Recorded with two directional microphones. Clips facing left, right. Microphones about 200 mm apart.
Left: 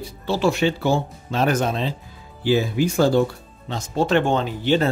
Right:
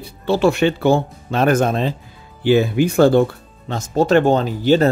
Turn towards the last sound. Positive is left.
turn(degrees=-40)  # may be behind; listen again after turning